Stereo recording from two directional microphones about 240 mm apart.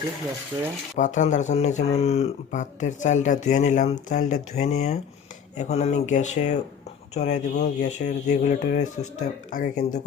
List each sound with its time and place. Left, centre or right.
0.9 s speech: left